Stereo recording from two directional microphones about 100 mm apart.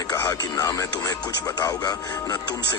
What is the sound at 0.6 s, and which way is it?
Speech, 35° left (ahead or behind).